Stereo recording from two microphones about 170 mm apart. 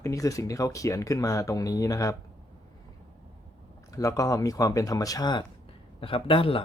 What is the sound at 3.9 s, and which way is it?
Speech, 20° left (ahead or behind).